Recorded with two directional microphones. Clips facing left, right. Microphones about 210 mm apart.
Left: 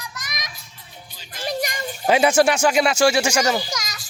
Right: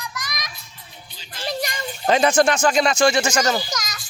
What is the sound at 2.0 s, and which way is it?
Speech, 10° left (ahead or behind).